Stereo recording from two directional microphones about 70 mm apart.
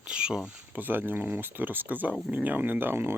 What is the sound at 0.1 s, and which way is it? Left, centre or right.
Speech, centre.